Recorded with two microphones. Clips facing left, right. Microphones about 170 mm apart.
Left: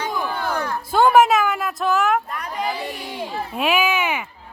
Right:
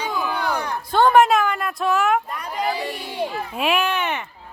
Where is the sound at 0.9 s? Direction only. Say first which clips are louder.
Even; 5° left (ahead or behind).